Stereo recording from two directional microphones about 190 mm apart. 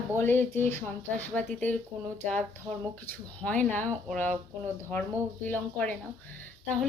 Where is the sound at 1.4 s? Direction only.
40° right (ahead or behind).